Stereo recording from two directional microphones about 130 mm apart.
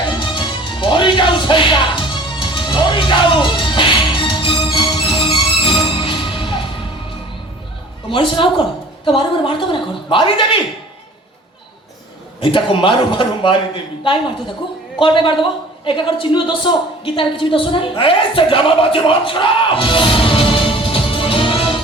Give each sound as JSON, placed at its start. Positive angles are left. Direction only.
{"t": 0.2, "sound": "music", "side_deg": 40}
{"t": 8.1, "sound": "a man's voice", "side_deg": 40}
{"t": 12.4, "sound": "a man's voice", "side_deg": 40}
{"t": 14.9, "sound": "a man's voice", "side_deg": 40}